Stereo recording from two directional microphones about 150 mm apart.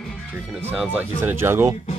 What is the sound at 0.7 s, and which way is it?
Speech, 10° right (ahead or behind).